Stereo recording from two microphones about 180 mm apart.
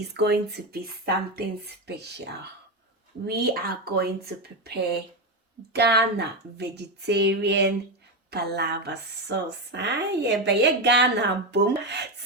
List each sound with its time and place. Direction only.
0.0 s speech: 65° right (ahead or behind)